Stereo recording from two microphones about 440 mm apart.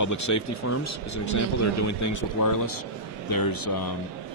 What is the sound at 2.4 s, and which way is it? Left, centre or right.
A man's voice, left.